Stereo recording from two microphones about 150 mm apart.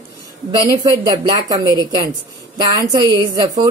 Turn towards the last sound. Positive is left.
turn(degrees=-25)  # may be behind; listen again after turning